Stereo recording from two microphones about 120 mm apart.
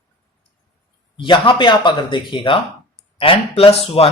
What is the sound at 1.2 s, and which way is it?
Speech, 45° left (ahead or behind).